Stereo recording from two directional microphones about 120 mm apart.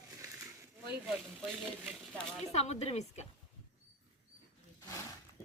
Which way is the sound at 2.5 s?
65° left (ahead or behind).